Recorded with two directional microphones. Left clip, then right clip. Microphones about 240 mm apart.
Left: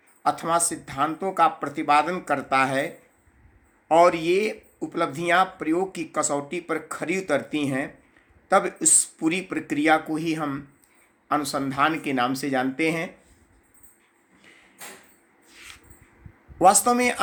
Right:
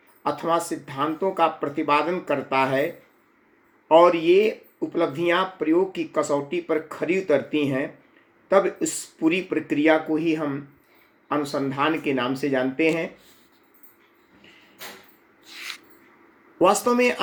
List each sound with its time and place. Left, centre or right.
0.2 s speech: centre
3.8 s speech: centre
15.5 s a sound: right
16.6 s speech: centre